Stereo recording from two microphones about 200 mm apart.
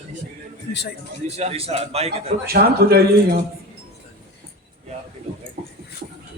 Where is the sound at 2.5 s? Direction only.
50° right (ahead or behind).